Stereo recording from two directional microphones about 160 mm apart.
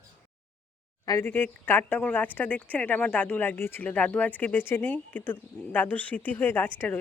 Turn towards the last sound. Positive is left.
turn(degrees=10)  # may be behind; listen again after turning